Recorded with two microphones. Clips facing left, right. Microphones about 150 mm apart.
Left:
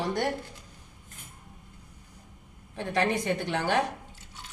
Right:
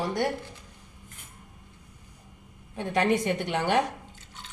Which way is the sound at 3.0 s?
20° right (ahead or behind).